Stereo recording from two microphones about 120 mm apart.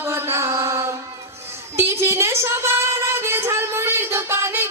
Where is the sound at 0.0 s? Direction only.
20° right (ahead or behind).